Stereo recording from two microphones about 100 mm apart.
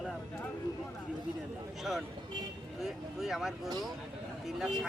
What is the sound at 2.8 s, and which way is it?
Speech, 5° right (ahead or behind).